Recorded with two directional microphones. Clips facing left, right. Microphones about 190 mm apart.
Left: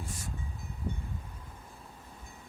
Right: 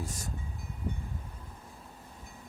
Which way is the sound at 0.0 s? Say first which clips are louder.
Right 3 dB; 40° right (ahead or behind).